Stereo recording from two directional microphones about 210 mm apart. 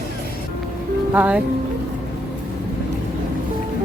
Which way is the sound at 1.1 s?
5° right (ahead or behind).